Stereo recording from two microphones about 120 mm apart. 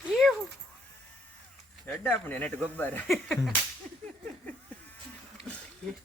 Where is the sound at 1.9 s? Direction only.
15° left (ahead or behind).